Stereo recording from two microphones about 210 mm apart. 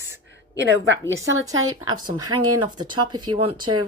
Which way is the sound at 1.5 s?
80° right.